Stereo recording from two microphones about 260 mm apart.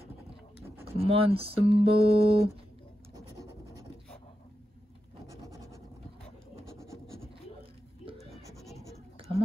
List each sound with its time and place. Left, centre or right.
0.6 s a sound: centre
0.9 s speech: right
3.2 s scratch: centre
8.2 s scratch: centre